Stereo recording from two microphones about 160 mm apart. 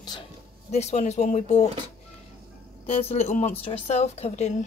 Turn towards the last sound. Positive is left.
turn(degrees=45)  # may be behind; listen again after turning